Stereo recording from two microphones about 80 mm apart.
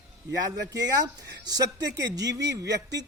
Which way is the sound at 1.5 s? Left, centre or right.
Right.